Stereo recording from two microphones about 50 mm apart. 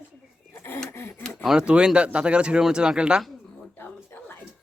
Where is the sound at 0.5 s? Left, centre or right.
Left.